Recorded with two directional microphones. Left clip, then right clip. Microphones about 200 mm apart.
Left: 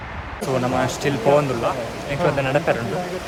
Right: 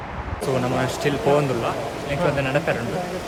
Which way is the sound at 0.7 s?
10° right (ahead or behind).